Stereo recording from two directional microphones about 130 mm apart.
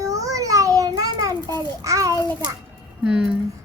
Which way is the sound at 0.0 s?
25° right (ahead or behind).